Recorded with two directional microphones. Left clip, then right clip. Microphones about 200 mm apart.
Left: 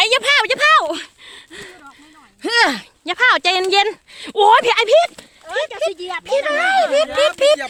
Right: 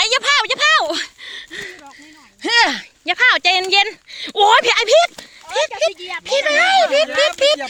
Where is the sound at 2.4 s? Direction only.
25° left (ahead or behind).